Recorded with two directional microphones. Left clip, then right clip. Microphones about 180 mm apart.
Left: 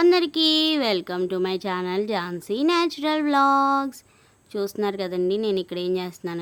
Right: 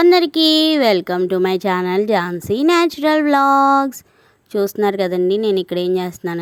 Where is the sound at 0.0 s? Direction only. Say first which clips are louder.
Right 6 dB; 35° right (ahead or behind).